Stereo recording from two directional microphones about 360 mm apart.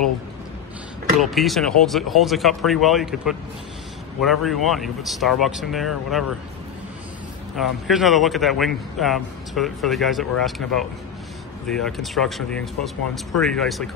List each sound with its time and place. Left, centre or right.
1.2 s a man's voice: centre
7.5 s a man's voice: centre